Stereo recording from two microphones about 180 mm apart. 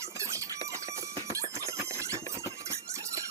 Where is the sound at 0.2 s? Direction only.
15° right (ahead or behind).